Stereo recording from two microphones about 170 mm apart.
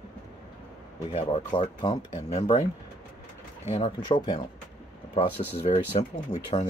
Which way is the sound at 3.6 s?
35° left (ahead or behind).